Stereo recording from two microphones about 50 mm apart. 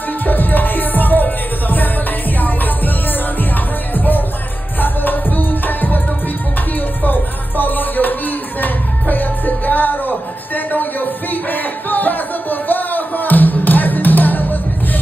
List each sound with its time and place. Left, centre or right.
0.2 s music: left
3.9 s music: left